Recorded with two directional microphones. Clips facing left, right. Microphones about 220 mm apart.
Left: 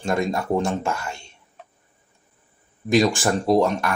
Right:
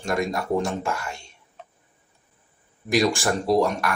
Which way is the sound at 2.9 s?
20° left (ahead or behind).